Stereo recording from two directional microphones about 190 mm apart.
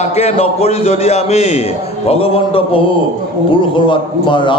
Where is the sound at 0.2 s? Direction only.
30° left (ahead or behind).